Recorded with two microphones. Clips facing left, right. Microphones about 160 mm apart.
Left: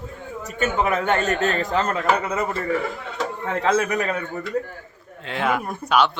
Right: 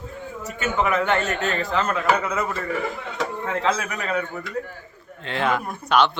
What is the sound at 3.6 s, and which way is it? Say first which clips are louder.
Speech: left 7 dB; 45° left (ahead or behind).